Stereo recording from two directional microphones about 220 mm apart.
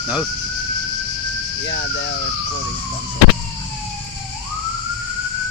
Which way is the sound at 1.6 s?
55° left (ahead or behind).